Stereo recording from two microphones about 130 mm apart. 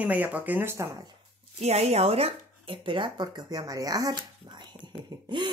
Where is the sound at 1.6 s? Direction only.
55° right (ahead or behind).